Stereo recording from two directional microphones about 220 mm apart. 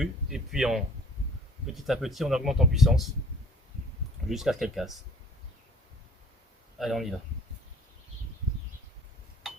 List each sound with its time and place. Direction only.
0.0 s speech: centre (ahead or behind)
4.3 s speech: centre (ahead or behind)
6.7 s speech: centre (ahead or behind)